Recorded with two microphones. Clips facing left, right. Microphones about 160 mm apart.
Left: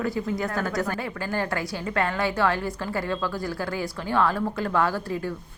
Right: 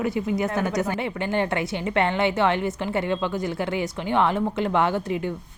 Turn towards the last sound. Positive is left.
turn(degrees=-20)  # may be behind; listen again after turning